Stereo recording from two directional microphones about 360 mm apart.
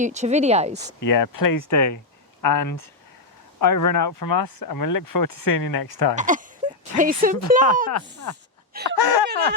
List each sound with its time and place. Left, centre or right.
0.0 s speech: centre
1.0 s speech: left
6.1 s speech: right
7.9 s speech: left
8.7 s a sound: right
9.0 s speech: left